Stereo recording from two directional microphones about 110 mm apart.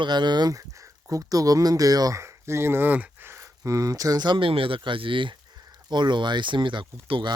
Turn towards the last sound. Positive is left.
turn(degrees=-50)  # may be behind; listen again after turning